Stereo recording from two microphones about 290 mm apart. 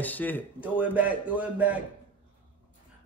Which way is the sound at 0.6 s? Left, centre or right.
Centre.